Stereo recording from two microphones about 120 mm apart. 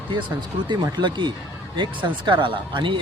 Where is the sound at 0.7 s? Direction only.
40° right (ahead or behind).